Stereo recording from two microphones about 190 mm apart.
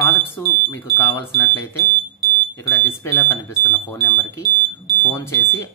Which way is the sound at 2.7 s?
15° left (ahead or behind).